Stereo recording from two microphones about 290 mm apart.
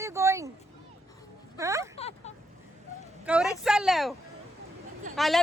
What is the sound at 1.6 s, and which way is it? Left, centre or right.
Speech, centre.